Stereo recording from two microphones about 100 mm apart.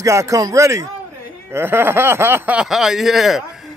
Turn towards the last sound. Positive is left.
turn(degrees=0)  # may be behind; listen again after turning